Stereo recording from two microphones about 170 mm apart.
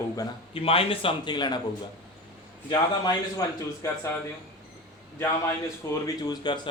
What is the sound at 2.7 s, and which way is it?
Speech, 25° left (ahead or behind).